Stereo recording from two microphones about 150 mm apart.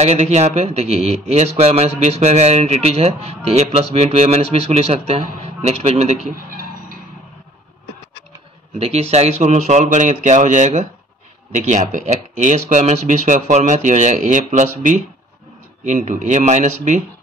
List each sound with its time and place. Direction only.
0.0 s speech: 45° right (ahead or behind)
6.3 s a sound: 70° right (ahead or behind)
8.7 s speech: 40° right (ahead or behind)